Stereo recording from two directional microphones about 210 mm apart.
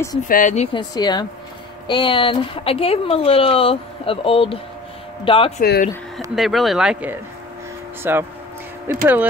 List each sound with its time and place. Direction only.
0.3 s speech: 35° left (ahead or behind)
0.7 s speech: 20° left (ahead or behind)
5.6 s speech: 45° left (ahead or behind)
6.3 s speech: centre (ahead or behind)